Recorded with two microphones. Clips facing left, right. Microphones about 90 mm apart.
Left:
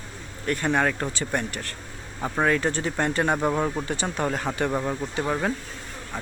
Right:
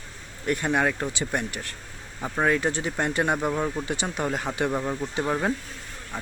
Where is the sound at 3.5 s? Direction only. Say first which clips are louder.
Left 2 dB; 15° left (ahead or behind).